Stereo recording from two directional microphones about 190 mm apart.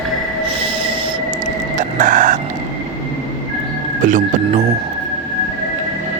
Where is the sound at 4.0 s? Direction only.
40° right (ahead or behind).